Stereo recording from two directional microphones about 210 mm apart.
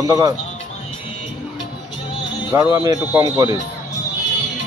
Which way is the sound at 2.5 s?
15° right (ahead or behind).